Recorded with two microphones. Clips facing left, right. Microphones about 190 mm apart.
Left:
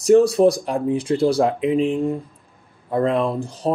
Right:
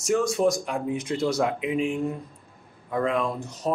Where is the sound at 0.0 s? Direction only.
35° left (ahead or behind).